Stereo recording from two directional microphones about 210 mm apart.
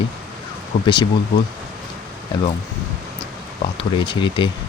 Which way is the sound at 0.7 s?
40° left (ahead or behind).